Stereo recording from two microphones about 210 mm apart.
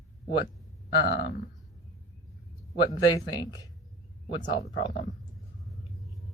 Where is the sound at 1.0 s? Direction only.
55° left (ahead or behind).